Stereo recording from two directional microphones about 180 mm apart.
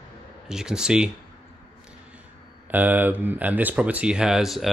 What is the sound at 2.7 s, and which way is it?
Speech, 10° right (ahead or behind).